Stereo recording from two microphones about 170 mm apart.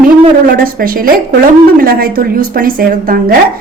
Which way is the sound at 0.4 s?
55° right (ahead or behind).